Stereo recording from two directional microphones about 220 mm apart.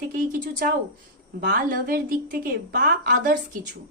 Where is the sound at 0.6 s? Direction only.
40° right (ahead or behind).